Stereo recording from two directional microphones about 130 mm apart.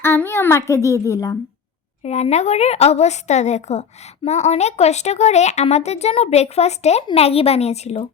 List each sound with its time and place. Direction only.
0.0 s a child's voice: 20° left (ahead or behind)
2.0 s speech: 55° left (ahead or behind)